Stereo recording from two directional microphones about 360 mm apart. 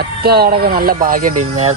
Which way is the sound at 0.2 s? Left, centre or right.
Right.